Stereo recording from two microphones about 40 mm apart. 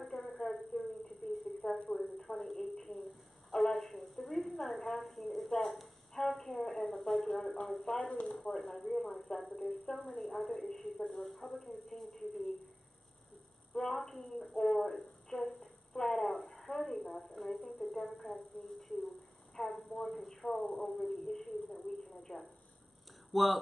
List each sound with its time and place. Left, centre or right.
0.0 s a sound: centre
4.6 s a woman's voice: centre; by 8.5 s left
8.5 s a woman's voice: centre
13.7 s a woman's voice: centre